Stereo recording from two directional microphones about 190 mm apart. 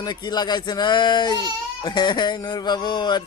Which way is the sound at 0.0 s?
20° left (ahead or behind).